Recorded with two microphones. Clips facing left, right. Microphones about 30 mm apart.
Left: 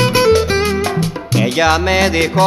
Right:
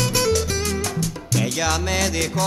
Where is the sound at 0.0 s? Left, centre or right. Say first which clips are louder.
Left 9 dB; left.